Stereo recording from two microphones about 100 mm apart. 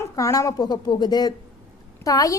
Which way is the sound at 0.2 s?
35° left (ahead or behind).